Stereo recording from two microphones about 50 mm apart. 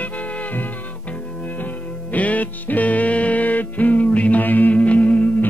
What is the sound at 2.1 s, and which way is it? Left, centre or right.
Music, left.